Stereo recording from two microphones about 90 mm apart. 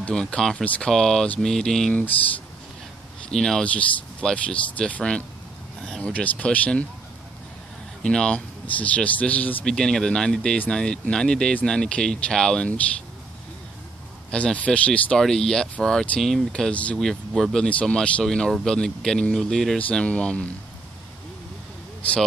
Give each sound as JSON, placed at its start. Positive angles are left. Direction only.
{"t": 0.0, "sound": "speech", "side_deg": 10}
{"t": 3.3, "sound": "speech", "side_deg": 5}
{"t": 8.0, "sound": "speech", "side_deg": 10}
{"t": 9.7, "sound": "speech", "side_deg": 5}
{"t": 14.3, "sound": "speech", "side_deg": 15}